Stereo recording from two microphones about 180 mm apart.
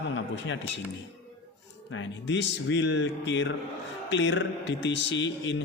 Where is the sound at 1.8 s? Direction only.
90° left.